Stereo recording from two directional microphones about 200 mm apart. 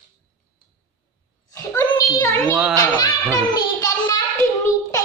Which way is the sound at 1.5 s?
20° left (ahead or behind).